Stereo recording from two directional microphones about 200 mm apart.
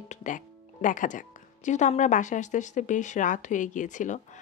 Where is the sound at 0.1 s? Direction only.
40° left (ahead or behind).